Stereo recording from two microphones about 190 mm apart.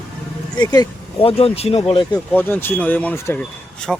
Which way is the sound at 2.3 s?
10° left (ahead or behind).